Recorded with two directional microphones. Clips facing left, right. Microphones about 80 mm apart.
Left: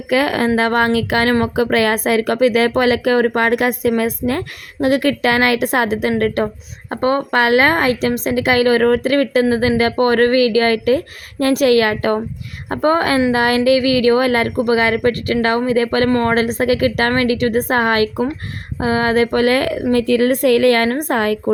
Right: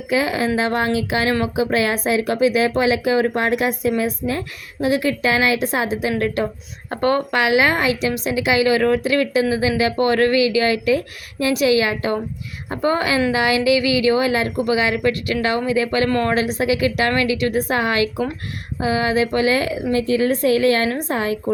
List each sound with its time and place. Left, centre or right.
0.1 s speech: left
6.9 s speech: left
7.3 s a woman's voice: left
12.6 s a woman's voice: left
14.5 s a woman's voice: left
16.0 s speech: left
16.3 s a woman's voice: left